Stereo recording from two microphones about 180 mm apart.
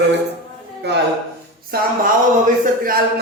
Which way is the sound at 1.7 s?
60° right (ahead or behind).